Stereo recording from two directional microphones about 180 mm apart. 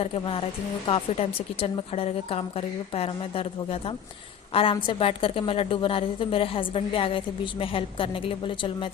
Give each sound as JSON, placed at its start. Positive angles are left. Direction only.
{"t": 0.0, "sound": "a woman's voice", "side_deg": 30}